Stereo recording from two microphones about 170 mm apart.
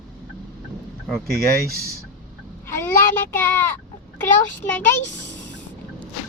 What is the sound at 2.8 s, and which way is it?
Child singing, 15° left (ahead or behind).